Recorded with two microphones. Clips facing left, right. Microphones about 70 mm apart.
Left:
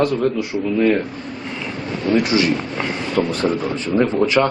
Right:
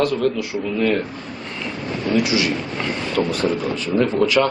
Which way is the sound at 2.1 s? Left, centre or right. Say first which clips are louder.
Left 2 dB; left.